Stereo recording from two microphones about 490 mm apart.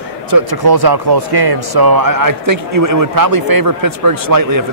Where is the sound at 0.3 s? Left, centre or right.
Right.